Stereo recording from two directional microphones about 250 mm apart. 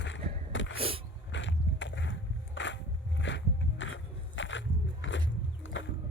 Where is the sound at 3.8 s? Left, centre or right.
Left.